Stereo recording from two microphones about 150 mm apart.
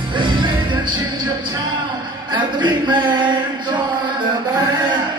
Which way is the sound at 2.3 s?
30° right (ahead or behind).